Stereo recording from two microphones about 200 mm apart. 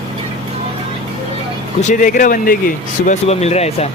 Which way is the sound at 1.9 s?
40° left (ahead or behind).